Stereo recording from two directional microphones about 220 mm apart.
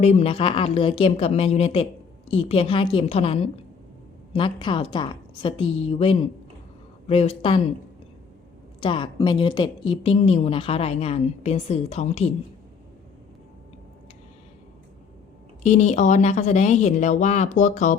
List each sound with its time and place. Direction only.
0.0 s a woman's voice: 30° left (ahead or behind)
8.8 s a woman's voice: 20° left (ahead or behind)
15.6 s speech: 30° left (ahead or behind)